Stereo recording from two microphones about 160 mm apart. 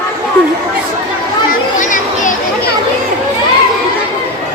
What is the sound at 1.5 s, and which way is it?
Chatter, 55° left (ahead or behind).